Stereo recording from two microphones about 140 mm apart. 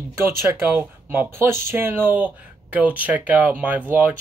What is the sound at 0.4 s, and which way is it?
Speech, 15° right (ahead or behind).